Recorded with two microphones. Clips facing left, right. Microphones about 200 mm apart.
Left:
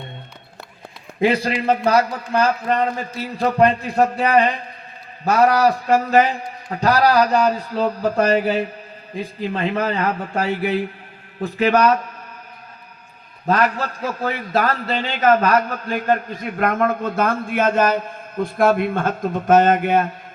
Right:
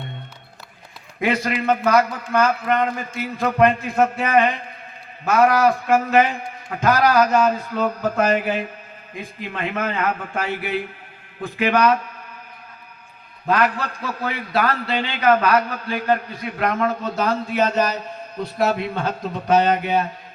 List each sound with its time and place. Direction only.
1.2 s a man's voice: 30° left (ahead or behind)
13.5 s a man's voice: 40° left (ahead or behind)